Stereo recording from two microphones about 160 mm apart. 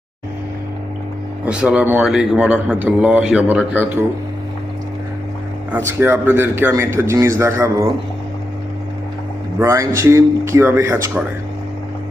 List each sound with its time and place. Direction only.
1.5 s a man's voice: 5° right (ahead or behind)
5.7 s a man's voice: 15° right (ahead or behind)
9.6 s a man's voice: 15° right (ahead or behind)